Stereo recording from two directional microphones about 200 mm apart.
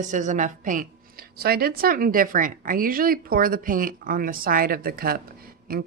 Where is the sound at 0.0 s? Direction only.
40° right (ahead or behind).